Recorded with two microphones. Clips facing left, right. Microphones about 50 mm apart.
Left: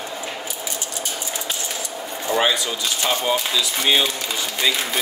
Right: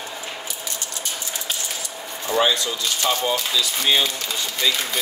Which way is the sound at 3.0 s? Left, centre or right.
Centre.